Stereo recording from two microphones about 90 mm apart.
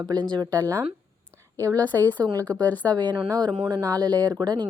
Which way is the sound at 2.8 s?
50° right (ahead or behind).